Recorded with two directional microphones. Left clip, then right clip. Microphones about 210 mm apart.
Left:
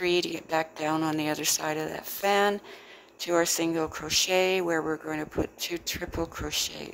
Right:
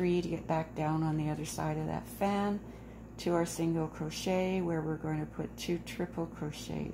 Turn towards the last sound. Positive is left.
turn(degrees=35)  # may be behind; listen again after turning